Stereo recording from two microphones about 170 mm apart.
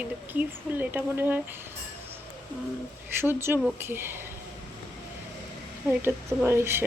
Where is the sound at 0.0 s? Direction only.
10° right (ahead or behind).